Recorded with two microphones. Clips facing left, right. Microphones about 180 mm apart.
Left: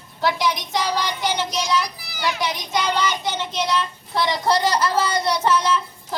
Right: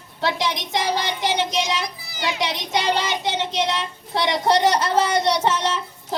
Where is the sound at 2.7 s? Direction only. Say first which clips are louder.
Even; 80° right.